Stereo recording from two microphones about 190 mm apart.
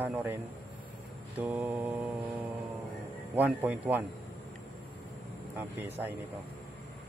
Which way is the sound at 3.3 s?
10° right (ahead or behind).